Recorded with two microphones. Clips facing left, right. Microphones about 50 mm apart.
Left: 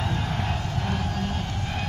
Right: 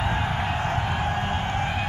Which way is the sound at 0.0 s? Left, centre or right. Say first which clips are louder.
Right 3 dB; right.